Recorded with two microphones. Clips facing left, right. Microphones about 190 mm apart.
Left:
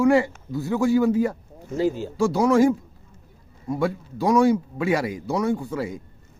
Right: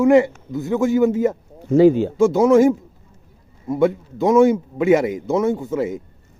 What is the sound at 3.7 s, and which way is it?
Speech, 20° right (ahead or behind).